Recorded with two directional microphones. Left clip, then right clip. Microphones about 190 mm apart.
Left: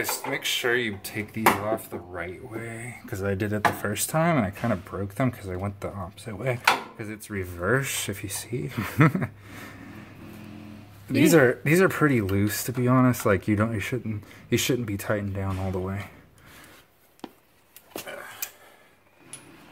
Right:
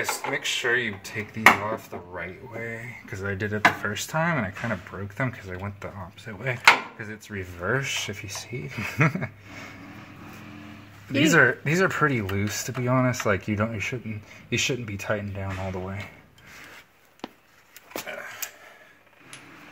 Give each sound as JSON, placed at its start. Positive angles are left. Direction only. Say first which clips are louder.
{"t": 0.3, "sound": "speech", "louder": "even", "side_deg": 45}
{"t": 11.3, "sound": "speech", "louder": "even", "side_deg": 35}